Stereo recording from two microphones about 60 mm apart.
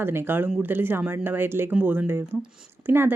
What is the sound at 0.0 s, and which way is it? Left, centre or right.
Speech, right.